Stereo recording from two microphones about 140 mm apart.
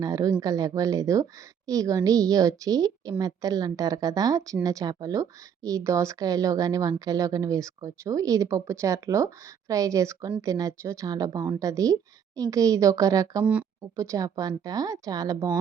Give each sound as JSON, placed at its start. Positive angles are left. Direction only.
{"t": 0.0, "sound": "a woman's voice", "side_deg": -25}
{"t": 13.4, "sound": "speech", "side_deg": -10}
{"t": 13.9, "sound": "a woman's voice", "side_deg": -20}